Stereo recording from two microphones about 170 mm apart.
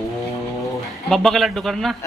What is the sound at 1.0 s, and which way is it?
Speech, centre (ahead or behind).